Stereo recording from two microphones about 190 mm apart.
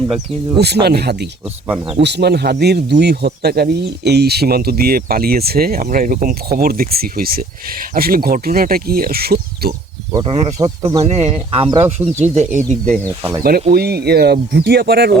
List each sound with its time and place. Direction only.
0.6 s speech: 60° right (ahead or behind)
10.1 s speech: 20° right (ahead or behind)
11.0 s speech: 35° right (ahead or behind)
12.6 s speech: 5° left (ahead or behind)
13.1 s speech: 15° right (ahead or behind)
13.7 s speech: 55° right (ahead or behind)